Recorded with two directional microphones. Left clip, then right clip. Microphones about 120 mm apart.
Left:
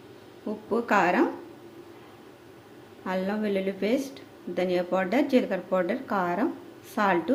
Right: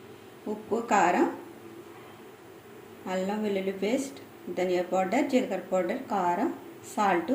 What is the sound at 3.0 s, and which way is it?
Speech, 25° left (ahead or behind).